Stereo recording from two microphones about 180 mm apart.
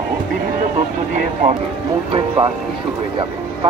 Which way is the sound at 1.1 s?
45° right (ahead or behind).